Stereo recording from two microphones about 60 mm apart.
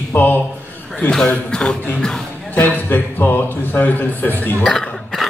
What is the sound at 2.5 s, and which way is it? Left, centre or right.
A man's voice, left.